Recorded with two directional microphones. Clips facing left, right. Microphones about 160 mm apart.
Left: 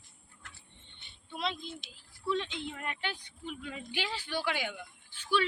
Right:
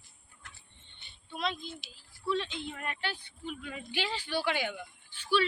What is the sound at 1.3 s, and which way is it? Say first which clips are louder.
A woman's voice: right 1 dB; 25° left (ahead or behind).